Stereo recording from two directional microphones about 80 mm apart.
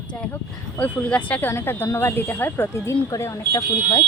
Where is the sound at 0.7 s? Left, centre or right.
Centre.